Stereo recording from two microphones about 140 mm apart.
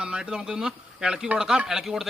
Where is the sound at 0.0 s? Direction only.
5° right (ahead or behind).